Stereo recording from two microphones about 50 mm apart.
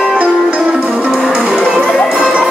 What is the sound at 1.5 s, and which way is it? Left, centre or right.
Music, centre.